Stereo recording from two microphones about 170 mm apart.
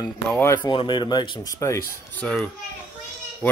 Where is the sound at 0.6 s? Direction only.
25° left (ahead or behind).